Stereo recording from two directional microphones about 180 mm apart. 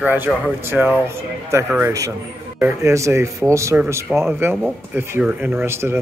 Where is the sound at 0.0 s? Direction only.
10° right (ahead or behind).